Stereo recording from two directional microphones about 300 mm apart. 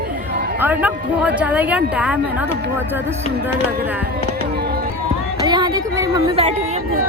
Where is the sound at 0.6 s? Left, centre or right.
Centre.